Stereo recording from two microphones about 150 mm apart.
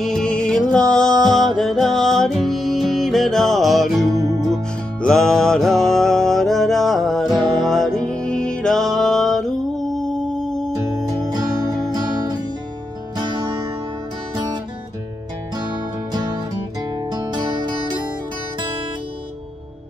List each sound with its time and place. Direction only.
0.0 s music: 5° left (ahead or behind)
15.5 s music: 30° right (ahead or behind)